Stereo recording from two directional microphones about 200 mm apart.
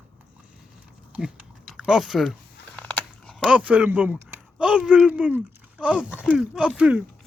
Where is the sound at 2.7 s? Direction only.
5° left (ahead or behind).